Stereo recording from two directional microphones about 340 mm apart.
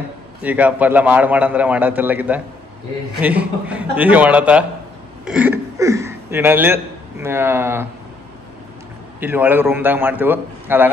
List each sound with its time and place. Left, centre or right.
0.4 s a man's voice: centre
9.2 s a man's voice: centre